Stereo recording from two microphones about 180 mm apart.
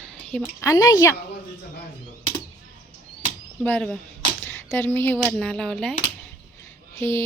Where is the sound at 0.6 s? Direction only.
20° left (ahead or behind).